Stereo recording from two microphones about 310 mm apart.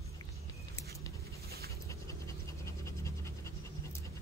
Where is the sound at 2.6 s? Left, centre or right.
Centre.